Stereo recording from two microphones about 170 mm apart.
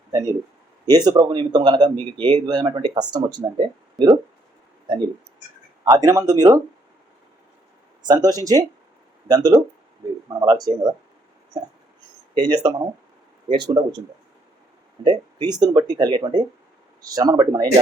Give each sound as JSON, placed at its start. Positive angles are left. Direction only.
{"t": 0.1, "sound": "speech", "side_deg": -20}
{"t": 5.8, "sound": "speech", "side_deg": -20}
{"t": 8.0, "sound": "speech", "side_deg": -25}
{"t": 15.0, "sound": "speech", "side_deg": -25}